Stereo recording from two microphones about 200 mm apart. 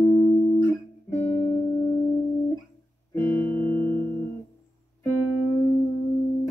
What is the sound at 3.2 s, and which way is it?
Music, 10° left (ahead or behind).